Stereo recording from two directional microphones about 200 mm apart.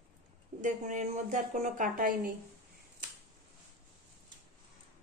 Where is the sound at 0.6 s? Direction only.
40° right (ahead or behind).